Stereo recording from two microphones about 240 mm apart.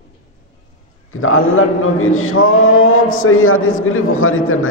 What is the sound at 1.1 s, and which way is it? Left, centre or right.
A man's voice, left.